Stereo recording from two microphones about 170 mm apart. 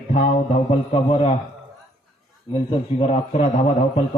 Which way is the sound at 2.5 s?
30° left (ahead or behind).